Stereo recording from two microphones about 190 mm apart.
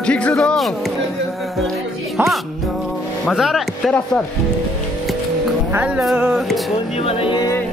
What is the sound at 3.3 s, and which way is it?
Speech, centre (ahead or behind).